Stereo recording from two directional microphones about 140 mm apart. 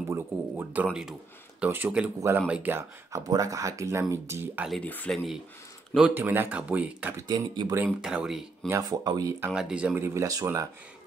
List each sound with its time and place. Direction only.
0.1 s a sound: 15° right (ahead or behind)
1.6 s speech: 10° right (ahead or behind)
3.1 s speech: 25° right (ahead or behind)
4.6 s speech: 10° left (ahead or behind)
5.9 s speech: 10° right (ahead or behind)
7.2 s speech: 30° right (ahead or behind)
8.0 s speech: 5° right (ahead or behind)
8.6 s speech: 25° right (ahead or behind)
9.5 s speech: 5° right (ahead or behind); by 10.7 s 20° right (ahead or behind)